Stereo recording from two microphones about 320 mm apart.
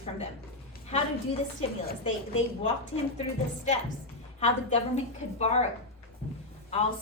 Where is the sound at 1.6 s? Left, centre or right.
Centre.